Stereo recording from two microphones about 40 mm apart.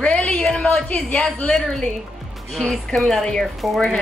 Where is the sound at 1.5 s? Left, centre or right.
Centre.